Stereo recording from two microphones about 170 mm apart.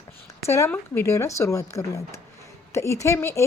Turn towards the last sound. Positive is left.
turn(degrees=15)  # may be behind; listen again after turning